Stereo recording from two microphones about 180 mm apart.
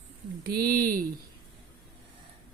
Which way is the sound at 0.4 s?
55° right (ahead or behind).